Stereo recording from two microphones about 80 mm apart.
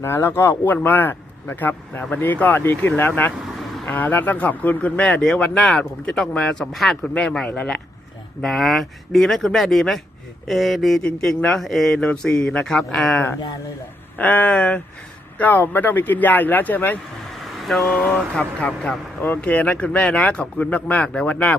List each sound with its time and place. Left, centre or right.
0.0 s speech: left
8.4 s speech: centre
14.2 s speech: centre
17.6 s speech: centre
18.6 s speech: centre